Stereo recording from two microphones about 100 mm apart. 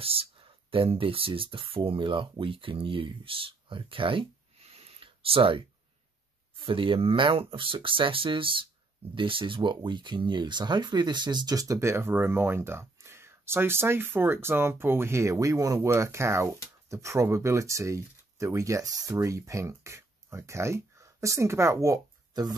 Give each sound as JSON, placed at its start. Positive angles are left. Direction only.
{"t": 0.0, "sound": "speech", "side_deg": -70}
{"t": 6.6, "sound": "speech", "side_deg": -60}